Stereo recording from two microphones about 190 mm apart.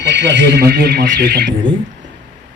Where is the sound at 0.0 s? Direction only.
60° right (ahead or behind).